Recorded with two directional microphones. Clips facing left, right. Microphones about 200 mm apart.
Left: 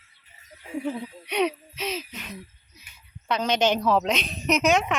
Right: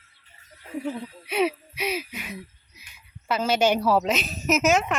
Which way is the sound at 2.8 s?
10° right (ahead or behind).